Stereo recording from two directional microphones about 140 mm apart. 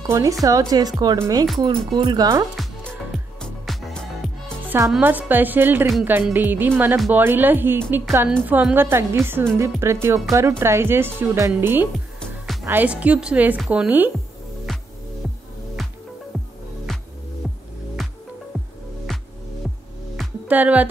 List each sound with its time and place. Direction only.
0.0 s speech: 25° right (ahead or behind)
1.6 s speech: 35° right (ahead or behind)
2.5 s music: centre (ahead or behind)
4.6 s a woman's voice: 20° right (ahead or behind)
14.7 s music: centre (ahead or behind)
17.4 s music: centre (ahead or behind)
20.4 s a woman's voice: 10° right (ahead or behind)